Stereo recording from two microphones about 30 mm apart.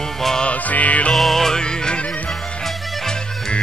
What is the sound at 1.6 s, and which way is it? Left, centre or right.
Music, left.